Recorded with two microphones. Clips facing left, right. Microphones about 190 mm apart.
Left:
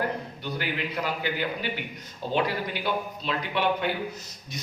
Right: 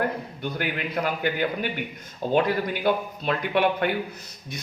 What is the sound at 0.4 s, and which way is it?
Speech, 50° right (ahead or behind).